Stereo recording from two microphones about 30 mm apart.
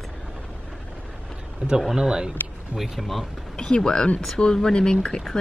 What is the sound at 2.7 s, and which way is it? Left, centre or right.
Speech, centre.